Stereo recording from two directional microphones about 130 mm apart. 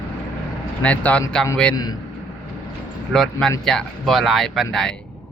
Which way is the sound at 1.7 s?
30° left (ahead or behind).